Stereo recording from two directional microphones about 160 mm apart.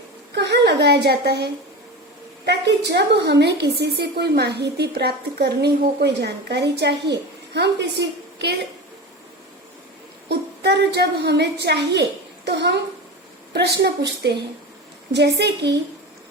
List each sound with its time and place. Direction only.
0.3 s a sound: 90° right
2.5 s a woman's voice: 90° right
10.2 s a woman's voice: 90° right